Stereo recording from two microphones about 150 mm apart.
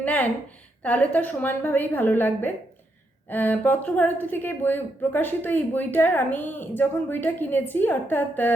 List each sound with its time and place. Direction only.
0.0 s a woman's voice: 10° left (ahead or behind)